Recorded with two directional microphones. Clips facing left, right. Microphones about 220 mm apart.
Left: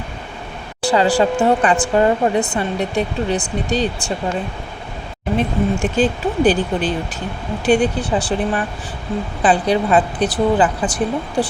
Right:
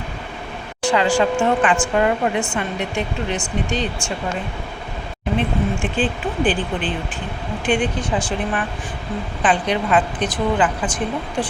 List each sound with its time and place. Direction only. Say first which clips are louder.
0.8 s speech: left 2 dB; 35° left (ahead or behind)
5.4 s speech: left 4 dB; 40° left (ahead or behind)